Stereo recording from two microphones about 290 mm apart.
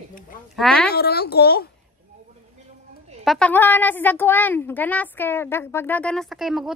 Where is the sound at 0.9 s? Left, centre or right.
Left.